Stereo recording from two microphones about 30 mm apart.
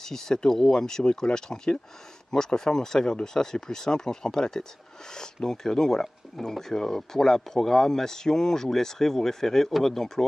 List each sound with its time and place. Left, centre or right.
0.0 s speech: centre